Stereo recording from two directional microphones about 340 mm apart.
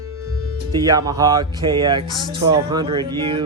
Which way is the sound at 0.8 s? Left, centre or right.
Centre.